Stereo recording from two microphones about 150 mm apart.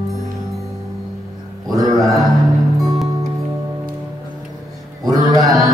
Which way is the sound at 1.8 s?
Centre (ahead or behind).